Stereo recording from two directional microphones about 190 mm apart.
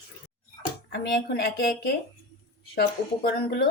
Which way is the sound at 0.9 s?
60° left (ahead or behind).